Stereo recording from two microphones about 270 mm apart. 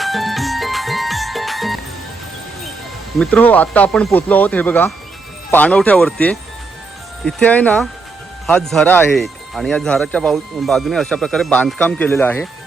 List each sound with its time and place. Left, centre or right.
0.0 s music: centre
3.2 s speech: centre